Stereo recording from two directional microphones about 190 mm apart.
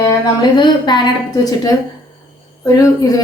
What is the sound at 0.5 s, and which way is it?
A woman's voice, 25° left (ahead or behind).